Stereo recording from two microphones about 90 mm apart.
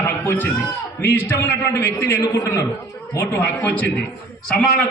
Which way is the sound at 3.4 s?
20° left (ahead or behind).